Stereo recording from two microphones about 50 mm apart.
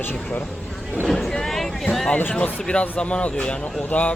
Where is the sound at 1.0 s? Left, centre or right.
Centre.